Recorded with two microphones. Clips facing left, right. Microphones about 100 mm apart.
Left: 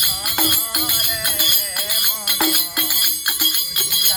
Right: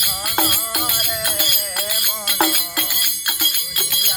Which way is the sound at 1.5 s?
20° left (ahead or behind).